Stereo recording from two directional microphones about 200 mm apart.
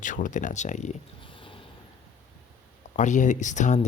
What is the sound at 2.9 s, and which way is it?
Speech, 40° left (ahead or behind).